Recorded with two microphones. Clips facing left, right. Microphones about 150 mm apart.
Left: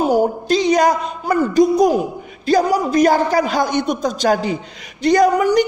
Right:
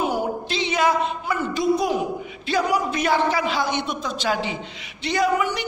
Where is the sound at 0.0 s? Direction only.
40° left (ahead or behind).